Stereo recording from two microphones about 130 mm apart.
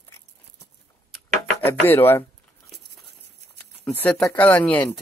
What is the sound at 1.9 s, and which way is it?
Speech, 15° left (ahead or behind).